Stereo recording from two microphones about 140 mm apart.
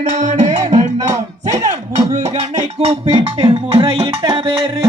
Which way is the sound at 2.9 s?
50° right (ahead or behind).